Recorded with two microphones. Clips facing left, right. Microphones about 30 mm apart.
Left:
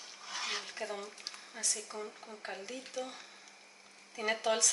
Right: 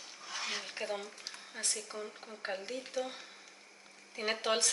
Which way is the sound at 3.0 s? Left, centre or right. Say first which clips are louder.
Right 3 dB; centre.